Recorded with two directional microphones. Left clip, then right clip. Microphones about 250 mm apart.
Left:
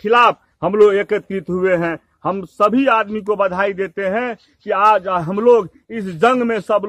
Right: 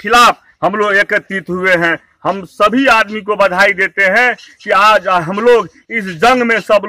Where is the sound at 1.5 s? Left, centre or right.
Centre.